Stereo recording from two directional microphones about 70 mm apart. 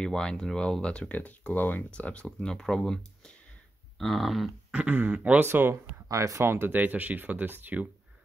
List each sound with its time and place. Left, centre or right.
0.0 s speech: centre
4.6 s speech: right
5.4 s speech: right
6.0 s speech: right
6.4 s speech: right